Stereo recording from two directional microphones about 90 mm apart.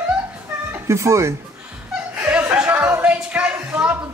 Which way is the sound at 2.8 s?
20° right (ahead or behind).